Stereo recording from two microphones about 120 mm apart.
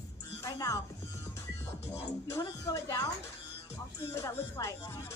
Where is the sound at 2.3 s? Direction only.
25° left (ahead or behind).